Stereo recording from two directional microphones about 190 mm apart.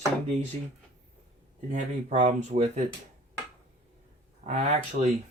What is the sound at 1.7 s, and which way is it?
Speech, 40° right (ahead or behind).